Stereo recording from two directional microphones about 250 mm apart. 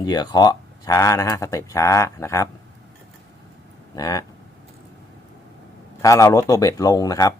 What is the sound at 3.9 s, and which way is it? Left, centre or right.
Speech, centre.